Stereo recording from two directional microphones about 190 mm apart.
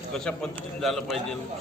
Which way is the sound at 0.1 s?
5° left (ahead or behind).